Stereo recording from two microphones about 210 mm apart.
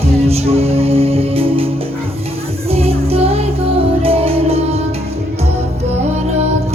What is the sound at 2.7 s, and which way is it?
Music, 30° right (ahead or behind).